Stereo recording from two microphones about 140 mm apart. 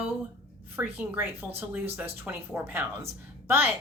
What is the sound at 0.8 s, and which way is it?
A woman's voice, 15° right (ahead or behind).